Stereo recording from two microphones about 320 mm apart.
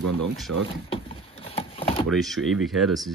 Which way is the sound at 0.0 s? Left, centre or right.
Right.